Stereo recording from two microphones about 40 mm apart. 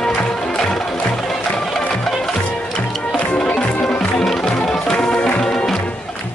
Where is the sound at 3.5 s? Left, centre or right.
Left.